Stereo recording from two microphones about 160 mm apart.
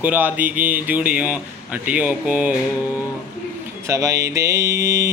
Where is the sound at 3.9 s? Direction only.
20° right (ahead or behind).